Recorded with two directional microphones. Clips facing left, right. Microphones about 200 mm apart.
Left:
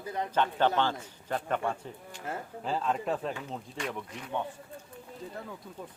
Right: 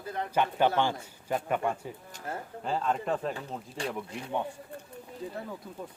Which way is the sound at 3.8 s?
30° right (ahead or behind).